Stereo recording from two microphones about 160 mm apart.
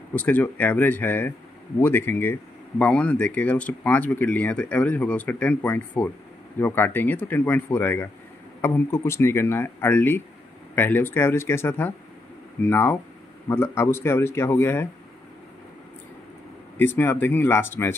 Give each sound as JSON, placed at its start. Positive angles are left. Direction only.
{"t": 0.1, "sound": "speech", "side_deg": 10}
{"t": 16.7, "sound": "speech", "side_deg": 15}